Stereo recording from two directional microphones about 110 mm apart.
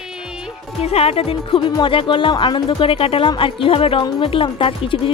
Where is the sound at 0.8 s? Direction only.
65° left (ahead or behind).